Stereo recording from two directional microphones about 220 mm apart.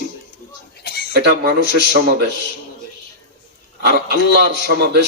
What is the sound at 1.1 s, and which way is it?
Speech, 50° right (ahead or behind).